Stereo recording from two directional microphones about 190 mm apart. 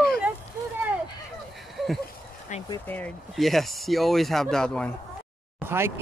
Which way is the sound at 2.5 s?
40° left (ahead or behind).